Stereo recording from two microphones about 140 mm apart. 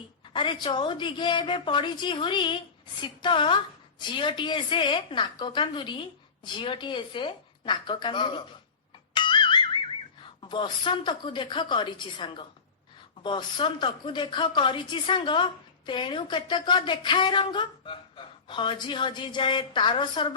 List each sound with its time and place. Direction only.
0.3 s a woman's voice: 35° left (ahead or behind)
9.1 s music: 35° left (ahead or behind)
10.4 s a woman's voice: 35° left (ahead or behind)